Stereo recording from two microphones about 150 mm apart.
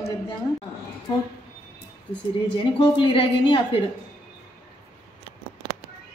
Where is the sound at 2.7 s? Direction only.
35° left (ahead or behind).